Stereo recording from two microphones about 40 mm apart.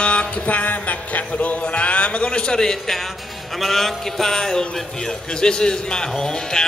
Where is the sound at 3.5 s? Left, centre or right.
Centre.